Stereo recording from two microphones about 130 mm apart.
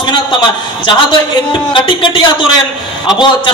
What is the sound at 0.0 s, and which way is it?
A man's voice, 35° left (ahead or behind).